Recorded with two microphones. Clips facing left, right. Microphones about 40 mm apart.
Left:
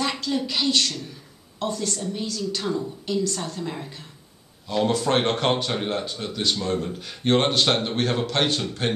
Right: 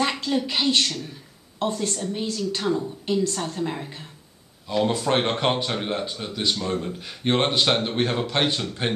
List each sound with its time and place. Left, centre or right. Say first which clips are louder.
0.2 s a woman's voice: right 1 dB; right
4.6 s speech: even; centre